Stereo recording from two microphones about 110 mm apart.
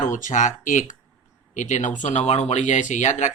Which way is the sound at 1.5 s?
90° left.